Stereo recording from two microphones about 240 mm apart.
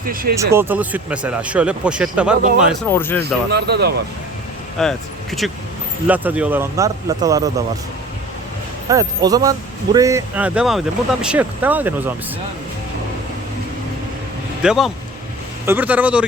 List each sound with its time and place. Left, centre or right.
0.0 s speech: right
0.5 s speech: centre
2.9 s speech: centre
3.5 s speech: right
4.8 s speech: centre
8.9 s speech: centre
14.6 s speech: centre